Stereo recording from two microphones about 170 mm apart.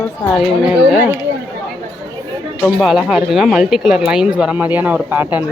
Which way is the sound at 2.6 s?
5° right (ahead or behind).